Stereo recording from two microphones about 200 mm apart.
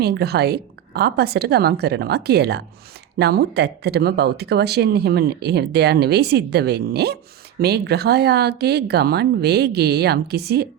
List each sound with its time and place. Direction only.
0.0 s speech: 55° right (ahead or behind)